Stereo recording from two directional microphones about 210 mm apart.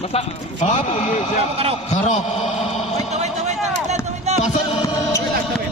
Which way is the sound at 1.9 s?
35° left (ahead or behind).